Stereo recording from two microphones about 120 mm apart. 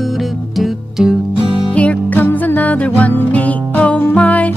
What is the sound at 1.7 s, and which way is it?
Music, 10° left (ahead or behind).